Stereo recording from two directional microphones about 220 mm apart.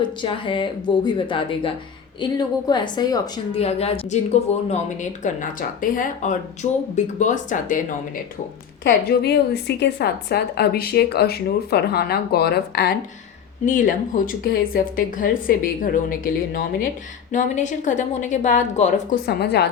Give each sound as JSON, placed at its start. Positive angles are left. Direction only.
{"t": 0.0, "sound": "a woman's voice", "side_deg": 20}
{"t": 8.8, "sound": "a woman's voice", "side_deg": 45}
{"t": 19.2, "sound": "a woman's voice", "side_deg": 50}